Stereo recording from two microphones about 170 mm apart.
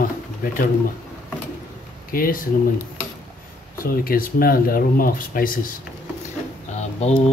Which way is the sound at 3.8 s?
60° left (ahead or behind).